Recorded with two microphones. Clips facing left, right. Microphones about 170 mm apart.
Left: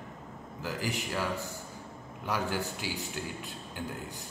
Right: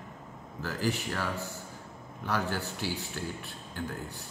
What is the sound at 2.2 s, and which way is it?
A man's voice, 15° left (ahead or behind).